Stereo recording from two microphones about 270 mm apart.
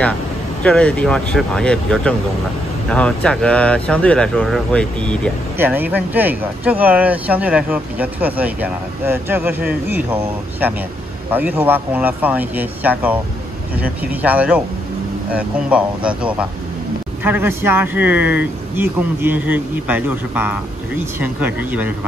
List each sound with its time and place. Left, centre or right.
0.7 s speech: centre
11.2 s speech: centre